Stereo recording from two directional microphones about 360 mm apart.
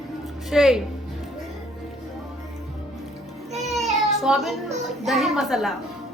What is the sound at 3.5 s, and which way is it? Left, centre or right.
Music, centre.